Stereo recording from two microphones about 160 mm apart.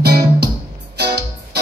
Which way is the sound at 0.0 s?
90° right.